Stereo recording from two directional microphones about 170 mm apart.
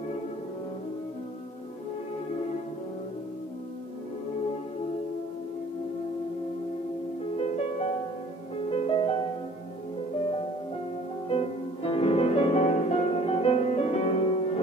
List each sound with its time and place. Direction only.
7.3 s music: 40° left (ahead or behind)
11.2 s music: 35° left (ahead or behind)